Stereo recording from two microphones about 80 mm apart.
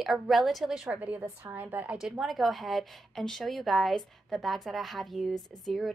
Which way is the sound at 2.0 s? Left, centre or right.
Centre.